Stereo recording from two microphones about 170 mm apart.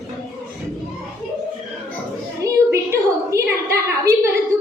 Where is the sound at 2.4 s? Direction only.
15° right (ahead or behind).